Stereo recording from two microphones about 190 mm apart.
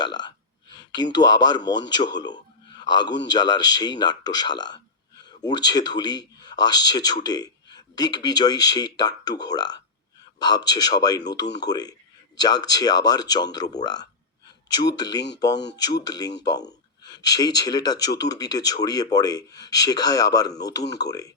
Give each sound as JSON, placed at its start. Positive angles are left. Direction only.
{"t": 0.0, "sound": "speech", "side_deg": 25}